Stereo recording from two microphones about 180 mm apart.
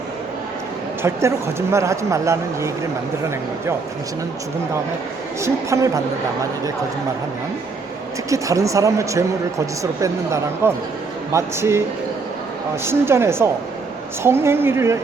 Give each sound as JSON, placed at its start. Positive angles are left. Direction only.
{"t": 1.0, "sound": "speech", "side_deg": -15}
{"t": 5.4, "sound": "speech", "side_deg": -15}
{"t": 8.3, "sound": "speech", "side_deg": -15}
{"t": 12.8, "sound": "speech", "side_deg": -15}